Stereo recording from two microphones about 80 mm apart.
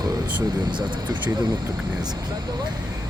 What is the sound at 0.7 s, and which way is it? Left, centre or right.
Speech, right.